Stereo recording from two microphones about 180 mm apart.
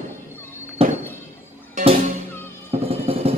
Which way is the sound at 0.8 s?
35° right (ahead or behind).